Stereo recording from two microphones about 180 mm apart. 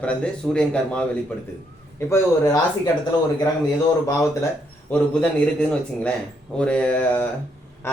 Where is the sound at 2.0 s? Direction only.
15° left (ahead or behind).